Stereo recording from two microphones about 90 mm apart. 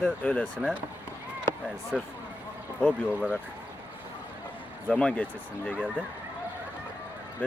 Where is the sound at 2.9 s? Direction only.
15° right (ahead or behind).